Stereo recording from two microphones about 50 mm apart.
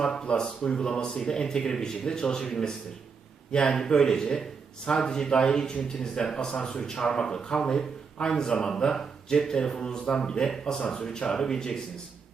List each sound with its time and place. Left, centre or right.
0.0 s speech: centre